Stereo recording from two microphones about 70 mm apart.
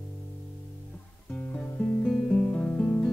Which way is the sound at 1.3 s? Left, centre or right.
Centre.